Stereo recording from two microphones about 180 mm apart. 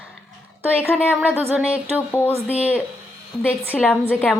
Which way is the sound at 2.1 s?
10° left (ahead or behind).